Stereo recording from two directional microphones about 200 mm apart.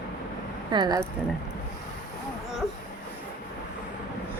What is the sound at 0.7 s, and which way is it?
Speech, 20° right (ahead or behind).